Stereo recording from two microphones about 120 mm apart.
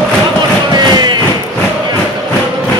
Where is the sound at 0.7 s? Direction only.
35° right (ahead or behind).